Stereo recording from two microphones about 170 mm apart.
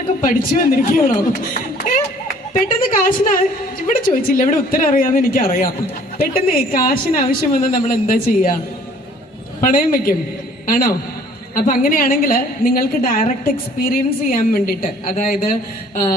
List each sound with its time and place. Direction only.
0.3 s a woman's voice: 55° left (ahead or behind)
9.6 s a woman's voice: 55° left (ahead or behind)